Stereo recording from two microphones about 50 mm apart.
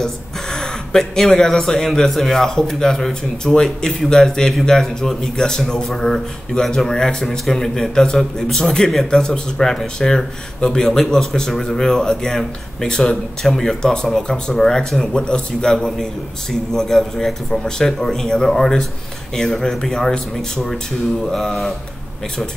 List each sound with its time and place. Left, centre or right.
0.0 s speech: centre